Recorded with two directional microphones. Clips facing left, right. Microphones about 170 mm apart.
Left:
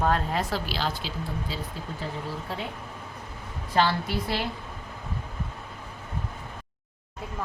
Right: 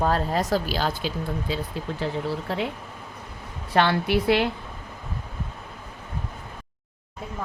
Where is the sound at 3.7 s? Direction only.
65° right (ahead or behind).